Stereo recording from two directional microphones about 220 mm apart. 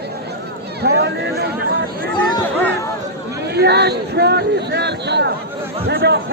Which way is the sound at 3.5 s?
50° right (ahead or behind).